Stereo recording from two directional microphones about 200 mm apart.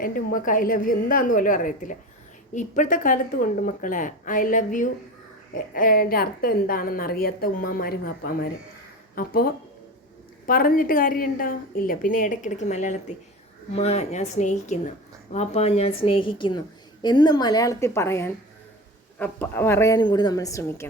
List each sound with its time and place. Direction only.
0.0 s a woman's voice: 45° left (ahead or behind); by 20.8 s 15° left (ahead or behind)